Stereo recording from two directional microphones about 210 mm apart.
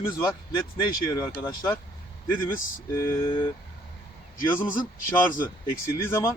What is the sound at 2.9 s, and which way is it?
Speech, 10° left (ahead or behind).